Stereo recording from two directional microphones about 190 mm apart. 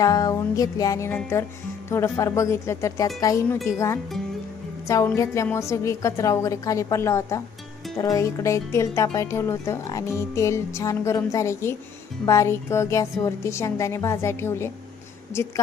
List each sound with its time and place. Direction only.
0.0 s speech: 20° left (ahead or behind)